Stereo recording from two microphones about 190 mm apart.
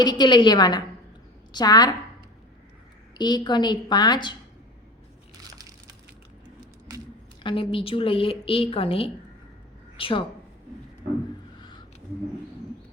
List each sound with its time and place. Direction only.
0.0 s a woman's voice: 20° left (ahead or behind)
3.2 s a woman's voice: 20° left (ahead or behind)
5.5 s splinter: 20° right (ahead or behind)
7.4 s a woman's voice: 25° left (ahead or behind)